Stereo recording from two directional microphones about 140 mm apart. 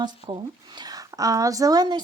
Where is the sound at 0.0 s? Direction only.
30° right (ahead or behind).